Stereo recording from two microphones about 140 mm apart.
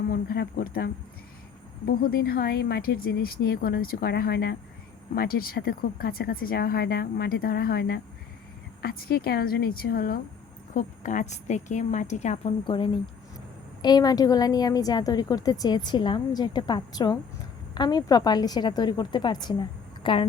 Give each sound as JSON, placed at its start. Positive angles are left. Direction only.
{"t": 0.1, "sound": "speech", "side_deg": 90}
{"t": 1.9, "sound": "speech", "side_deg": 90}
{"t": 10.8, "sound": "a woman's voice", "side_deg": 65}
{"t": 12.6, "sound": "a woman's voice", "side_deg": 40}